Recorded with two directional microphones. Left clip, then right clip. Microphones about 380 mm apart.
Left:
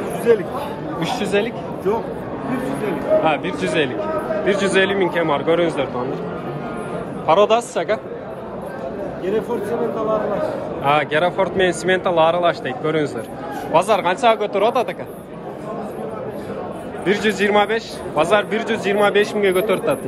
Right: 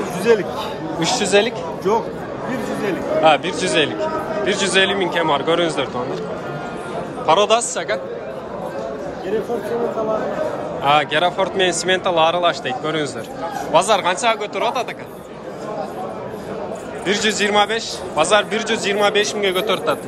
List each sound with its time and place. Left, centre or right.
0.3 s speech: right
0.9 s speech: centre
1.9 s speech: right
3.3 s a man's voice: centre
7.2 s a man's voice: centre
10.8 s a man's voice: centre
17.0 s a man's voice: centre